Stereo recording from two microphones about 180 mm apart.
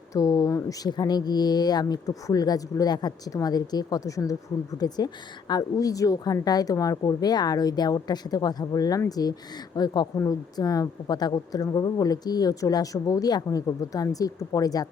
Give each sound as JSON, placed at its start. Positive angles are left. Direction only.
{"t": 0.1, "sound": "a woman's voice", "side_deg": 20}